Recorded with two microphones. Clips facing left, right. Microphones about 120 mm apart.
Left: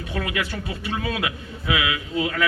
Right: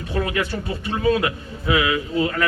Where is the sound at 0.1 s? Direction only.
35° right (ahead or behind).